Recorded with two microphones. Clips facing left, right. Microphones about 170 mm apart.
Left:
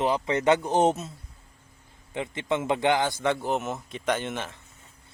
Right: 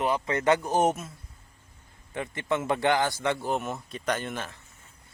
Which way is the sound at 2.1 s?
20° left (ahead or behind).